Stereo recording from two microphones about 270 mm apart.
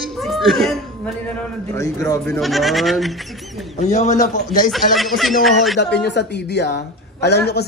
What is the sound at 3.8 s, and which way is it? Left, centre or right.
Speech, left.